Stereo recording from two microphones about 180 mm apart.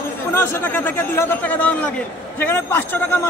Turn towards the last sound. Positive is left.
turn(degrees=10)  # may be behind; listen again after turning